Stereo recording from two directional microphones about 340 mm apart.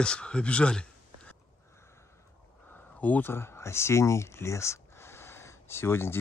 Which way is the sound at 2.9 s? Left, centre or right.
Centre.